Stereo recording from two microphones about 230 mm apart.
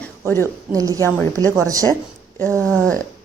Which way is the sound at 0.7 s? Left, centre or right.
Centre.